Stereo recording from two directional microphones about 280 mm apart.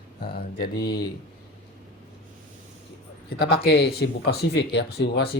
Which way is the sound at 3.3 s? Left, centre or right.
Left.